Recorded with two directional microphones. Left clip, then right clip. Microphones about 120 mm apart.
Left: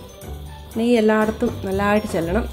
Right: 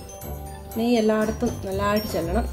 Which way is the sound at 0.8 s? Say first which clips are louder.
Left 4 dB; 40° left (ahead or behind).